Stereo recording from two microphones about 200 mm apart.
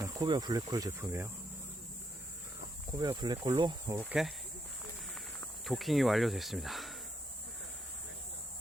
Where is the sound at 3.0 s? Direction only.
20° right (ahead or behind).